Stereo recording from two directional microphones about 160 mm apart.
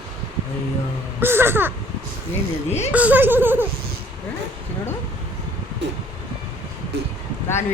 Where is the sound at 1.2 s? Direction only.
15° right (ahead or behind).